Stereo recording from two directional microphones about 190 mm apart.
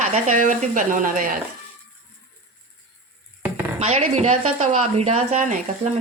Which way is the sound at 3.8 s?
35° right (ahead or behind).